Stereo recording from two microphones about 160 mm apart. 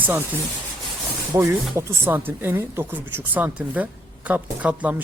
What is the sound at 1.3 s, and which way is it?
Speech, 20° right (ahead or behind).